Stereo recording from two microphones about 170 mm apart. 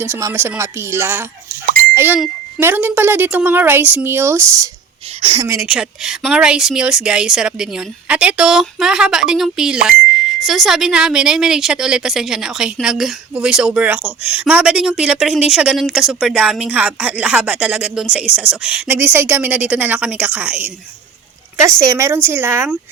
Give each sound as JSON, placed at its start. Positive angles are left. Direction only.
{"t": 0.0, "sound": "speech", "side_deg": -15}
{"t": 5.2, "sound": "a woman's voice", "side_deg": -30}
{"t": 5.5, "sound": "speech", "side_deg": -5}